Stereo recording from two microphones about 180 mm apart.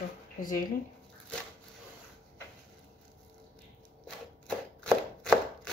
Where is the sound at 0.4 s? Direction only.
50° left (ahead or behind).